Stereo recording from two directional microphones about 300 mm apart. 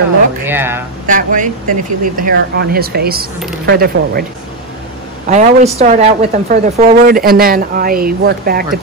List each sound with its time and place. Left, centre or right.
0.5 s speech: centre
1.0 s speech: right
5.3 s speech: right